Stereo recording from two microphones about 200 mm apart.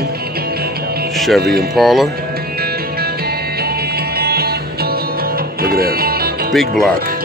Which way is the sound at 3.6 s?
50° right (ahead or behind).